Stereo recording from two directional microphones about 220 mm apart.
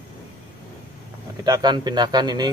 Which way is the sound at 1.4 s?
20° right (ahead or behind).